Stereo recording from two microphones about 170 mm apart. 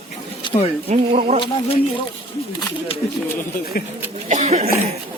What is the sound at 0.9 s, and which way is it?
Speech, 40° right (ahead or behind).